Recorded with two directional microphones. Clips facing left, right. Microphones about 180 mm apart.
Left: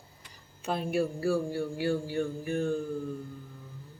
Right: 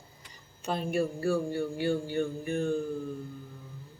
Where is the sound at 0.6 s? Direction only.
5° left (ahead or behind).